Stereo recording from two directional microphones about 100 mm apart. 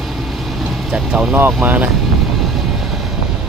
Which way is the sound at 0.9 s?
5° right (ahead or behind).